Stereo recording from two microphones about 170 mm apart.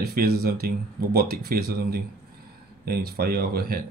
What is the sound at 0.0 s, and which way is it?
Speech, 65° right (ahead or behind).